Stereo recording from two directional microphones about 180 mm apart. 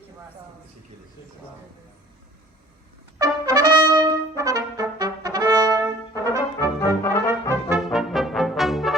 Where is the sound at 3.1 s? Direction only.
20° right (ahead or behind).